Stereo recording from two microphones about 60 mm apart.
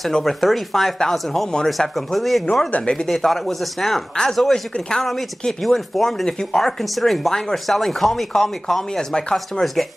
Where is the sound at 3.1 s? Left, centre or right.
Centre.